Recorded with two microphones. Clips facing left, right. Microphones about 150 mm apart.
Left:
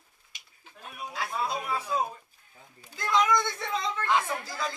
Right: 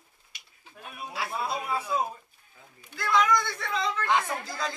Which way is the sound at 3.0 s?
20° left (ahead or behind).